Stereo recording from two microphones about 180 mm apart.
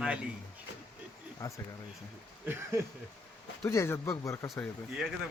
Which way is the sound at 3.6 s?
15° left (ahead or behind).